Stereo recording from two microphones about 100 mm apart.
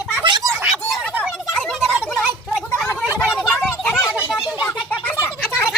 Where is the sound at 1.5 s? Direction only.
5° left (ahead or behind).